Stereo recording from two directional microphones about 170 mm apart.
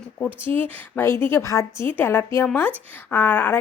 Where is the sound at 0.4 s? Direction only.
10° left (ahead or behind).